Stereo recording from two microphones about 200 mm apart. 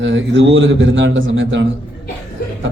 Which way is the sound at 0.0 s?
70° right (ahead or behind).